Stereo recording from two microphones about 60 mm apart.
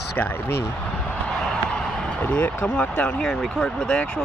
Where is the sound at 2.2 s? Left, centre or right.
Left.